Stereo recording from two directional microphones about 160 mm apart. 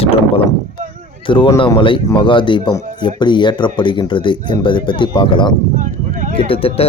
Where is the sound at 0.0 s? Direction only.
35° left (ahead or behind).